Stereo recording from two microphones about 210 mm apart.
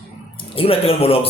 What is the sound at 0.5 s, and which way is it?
Speech, 25° left (ahead or behind).